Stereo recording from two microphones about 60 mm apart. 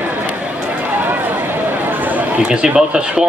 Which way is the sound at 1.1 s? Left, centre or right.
Right.